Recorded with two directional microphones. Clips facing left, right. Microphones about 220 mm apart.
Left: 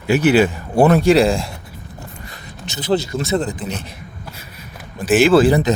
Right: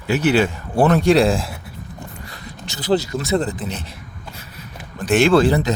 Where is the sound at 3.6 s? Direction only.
15° left (ahead or behind).